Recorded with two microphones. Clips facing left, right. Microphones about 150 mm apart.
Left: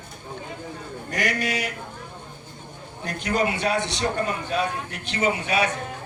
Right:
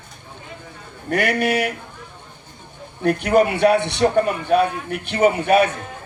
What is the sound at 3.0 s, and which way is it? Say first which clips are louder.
A man's voice: right 9 dB; 60° right (ahead or behind).